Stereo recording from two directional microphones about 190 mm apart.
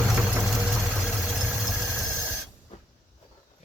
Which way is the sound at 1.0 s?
Centre (ahead or behind).